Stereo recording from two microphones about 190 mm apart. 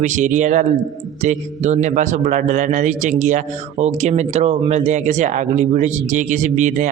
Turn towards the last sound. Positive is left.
turn(degrees=-40)  # may be behind; listen again after turning